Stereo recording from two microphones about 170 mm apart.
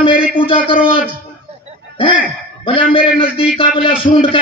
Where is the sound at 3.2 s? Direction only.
30° left (ahead or behind).